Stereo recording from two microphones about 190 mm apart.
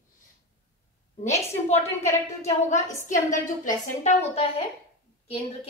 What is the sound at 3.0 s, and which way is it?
A woman's voice, 40° left (ahead or behind).